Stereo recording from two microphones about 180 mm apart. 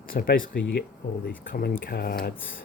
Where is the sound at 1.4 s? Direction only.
55° left (ahead or behind).